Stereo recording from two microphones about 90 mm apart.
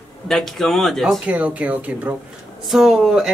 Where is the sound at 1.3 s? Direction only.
15° right (ahead or behind).